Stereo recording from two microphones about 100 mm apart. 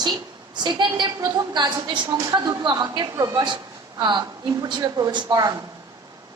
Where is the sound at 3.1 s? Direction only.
35° right (ahead or behind).